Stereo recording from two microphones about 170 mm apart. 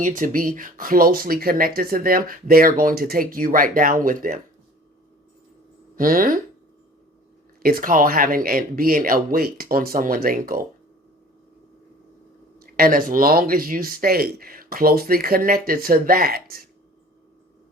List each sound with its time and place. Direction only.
0.0 s speech: 50° right (ahead or behind)
6.0 s speech: 55° right (ahead or behind)
7.6 s speech: 60° right (ahead or behind)
12.5 s speech: 60° right (ahead or behind)